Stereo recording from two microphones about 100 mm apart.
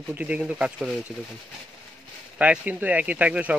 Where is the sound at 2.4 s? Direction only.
15° right (ahead or behind).